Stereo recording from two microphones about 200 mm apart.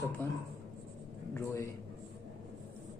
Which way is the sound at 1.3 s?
15° left (ahead or behind).